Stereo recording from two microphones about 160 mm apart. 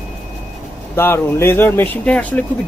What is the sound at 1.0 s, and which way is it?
Speech, 15° left (ahead or behind).